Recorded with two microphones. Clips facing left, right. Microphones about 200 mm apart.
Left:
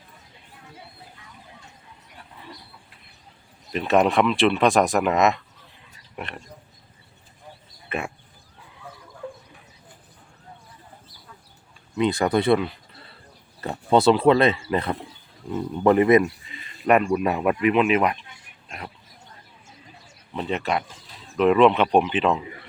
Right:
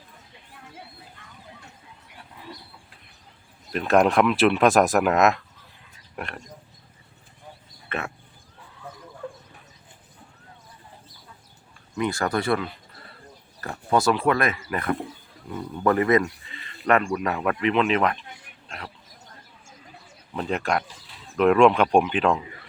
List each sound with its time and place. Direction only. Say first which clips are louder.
3.7 s speech: even; centre (ahead or behind)
7.9 s speech: left 2 dB; 10° left (ahead or behind)
11.9 s speech: left 4 dB; 20° left (ahead or behind)
20.3 s speech: even; centre (ahead or behind)